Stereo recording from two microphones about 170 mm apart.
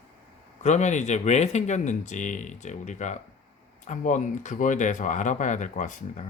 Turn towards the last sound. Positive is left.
turn(degrees=45)  # may be behind; listen again after turning